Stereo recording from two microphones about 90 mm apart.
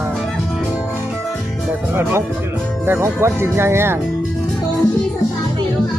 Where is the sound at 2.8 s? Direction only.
25° right (ahead or behind).